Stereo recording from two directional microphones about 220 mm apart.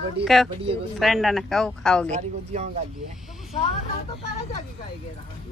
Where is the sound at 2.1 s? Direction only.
30° right (ahead or behind).